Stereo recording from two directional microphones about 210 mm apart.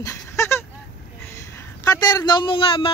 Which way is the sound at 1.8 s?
15° left (ahead or behind).